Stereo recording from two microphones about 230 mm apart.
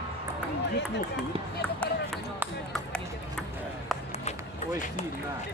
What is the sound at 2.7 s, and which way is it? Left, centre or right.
Run, centre.